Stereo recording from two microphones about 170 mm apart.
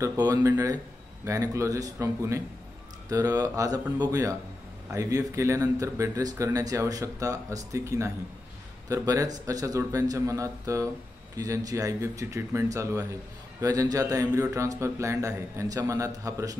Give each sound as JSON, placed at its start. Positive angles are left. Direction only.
{"t": 0.0, "sound": "speech", "side_deg": -20}